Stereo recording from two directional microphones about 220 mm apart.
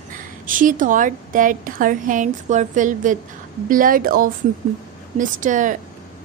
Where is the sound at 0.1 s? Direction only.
40° right (ahead or behind).